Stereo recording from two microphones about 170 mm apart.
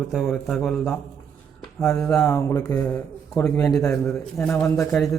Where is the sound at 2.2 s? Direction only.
20° left (ahead or behind).